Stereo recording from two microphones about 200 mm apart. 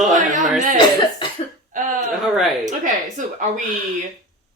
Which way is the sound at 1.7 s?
40° right (ahead or behind).